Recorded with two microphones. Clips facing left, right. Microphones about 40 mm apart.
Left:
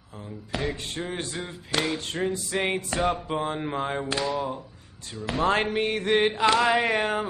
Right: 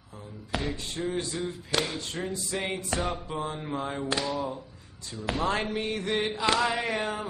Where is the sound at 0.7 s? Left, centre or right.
Left.